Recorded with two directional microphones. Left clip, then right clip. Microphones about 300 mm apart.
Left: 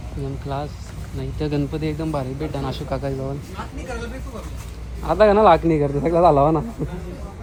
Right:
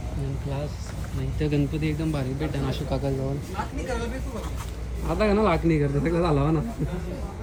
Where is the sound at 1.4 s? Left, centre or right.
Centre.